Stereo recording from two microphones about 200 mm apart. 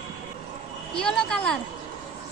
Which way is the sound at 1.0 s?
5° left (ahead or behind).